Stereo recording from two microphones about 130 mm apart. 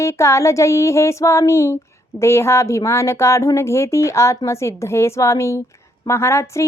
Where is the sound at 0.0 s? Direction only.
20° left (ahead or behind).